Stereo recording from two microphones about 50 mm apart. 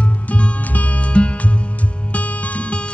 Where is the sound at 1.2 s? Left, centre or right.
Left.